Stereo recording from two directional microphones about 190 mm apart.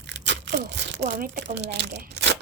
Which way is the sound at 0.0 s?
65° right (ahead or behind).